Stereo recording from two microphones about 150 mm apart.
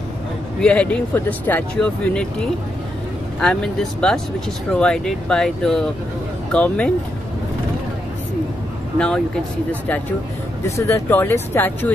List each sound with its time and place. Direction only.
0.6 s speech: 10° left (ahead or behind)
8.9 s speech: 5° left (ahead or behind)